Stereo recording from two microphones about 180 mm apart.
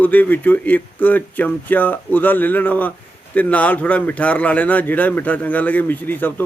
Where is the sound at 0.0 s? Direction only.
10° left (ahead or behind).